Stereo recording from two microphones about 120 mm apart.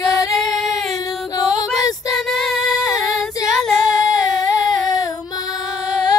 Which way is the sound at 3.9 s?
30° left (ahead or behind).